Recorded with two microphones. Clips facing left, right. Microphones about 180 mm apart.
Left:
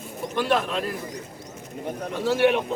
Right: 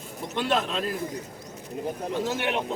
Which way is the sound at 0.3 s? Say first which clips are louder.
Left 3 dB; 20° right (ahead or behind).